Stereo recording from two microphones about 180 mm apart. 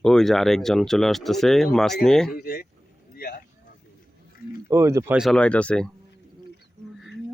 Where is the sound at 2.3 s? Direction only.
55° left (ahead or behind).